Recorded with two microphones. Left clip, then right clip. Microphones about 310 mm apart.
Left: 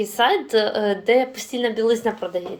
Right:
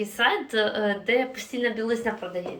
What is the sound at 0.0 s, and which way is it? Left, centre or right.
A woman's voice, centre.